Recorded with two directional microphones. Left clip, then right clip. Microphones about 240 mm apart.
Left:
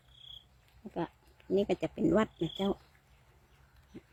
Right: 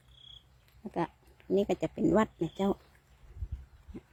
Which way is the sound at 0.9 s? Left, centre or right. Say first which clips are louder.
Right 4 dB; centre.